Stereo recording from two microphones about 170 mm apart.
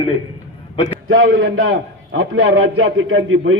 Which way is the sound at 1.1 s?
65° right (ahead or behind).